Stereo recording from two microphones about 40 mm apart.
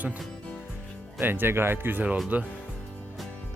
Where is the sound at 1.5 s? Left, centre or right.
Right.